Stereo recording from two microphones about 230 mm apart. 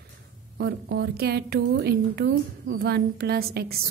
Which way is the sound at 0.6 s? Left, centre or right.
Right.